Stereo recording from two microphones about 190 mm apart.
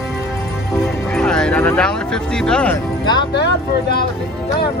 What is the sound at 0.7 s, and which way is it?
Speech, 5° left (ahead or behind).